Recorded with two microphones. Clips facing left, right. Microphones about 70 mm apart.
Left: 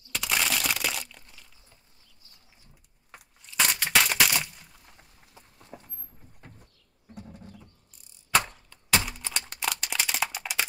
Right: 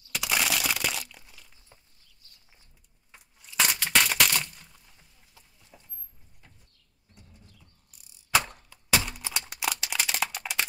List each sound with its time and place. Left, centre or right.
0.1 s crumpling: centre
3.4 s a sound: centre
5.6 s horse: left
6.4 s sliding door: left
7.2 s bird: left
8.3 s a sound: centre
9.1 s music: centre